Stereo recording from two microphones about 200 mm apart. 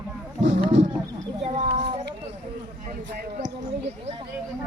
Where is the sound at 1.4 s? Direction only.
35° right (ahead or behind).